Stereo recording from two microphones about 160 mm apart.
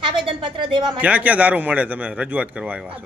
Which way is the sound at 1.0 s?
10° right (ahead or behind).